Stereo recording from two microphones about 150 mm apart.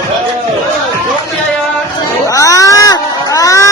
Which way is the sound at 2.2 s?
20° left (ahead or behind).